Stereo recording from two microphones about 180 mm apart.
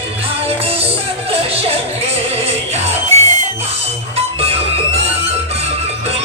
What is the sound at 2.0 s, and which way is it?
Music, 35° right (ahead or behind).